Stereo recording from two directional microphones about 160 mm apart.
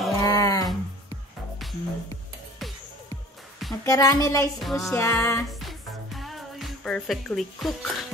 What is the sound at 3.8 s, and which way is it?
Speech, 20° left (ahead or behind).